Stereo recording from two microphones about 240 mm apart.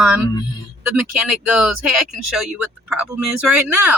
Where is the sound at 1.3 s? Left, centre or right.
Centre.